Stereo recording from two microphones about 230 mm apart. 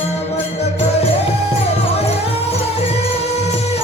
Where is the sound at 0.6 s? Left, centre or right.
Left.